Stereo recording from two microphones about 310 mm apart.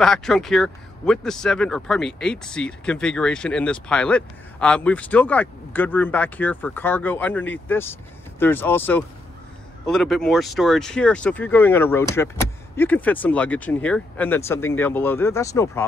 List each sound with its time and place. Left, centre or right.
0.0 s speech: centre